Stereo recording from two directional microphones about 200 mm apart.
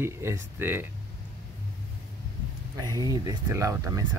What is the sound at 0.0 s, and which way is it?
Speech, 10° right (ahead or behind).